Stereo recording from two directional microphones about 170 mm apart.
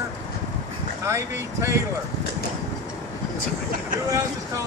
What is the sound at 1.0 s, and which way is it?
Speech, 15° right (ahead or behind).